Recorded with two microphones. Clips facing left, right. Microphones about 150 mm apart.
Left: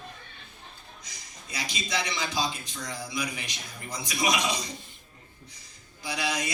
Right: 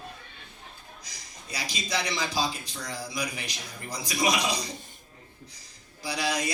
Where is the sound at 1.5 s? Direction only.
35° right (ahead or behind).